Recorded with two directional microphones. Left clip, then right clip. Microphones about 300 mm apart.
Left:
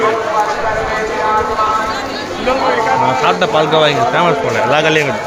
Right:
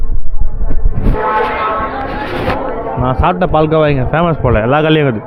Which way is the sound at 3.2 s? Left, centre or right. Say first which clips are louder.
Even; centre.